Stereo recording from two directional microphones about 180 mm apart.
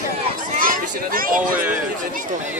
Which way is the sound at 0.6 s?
50° right (ahead or behind).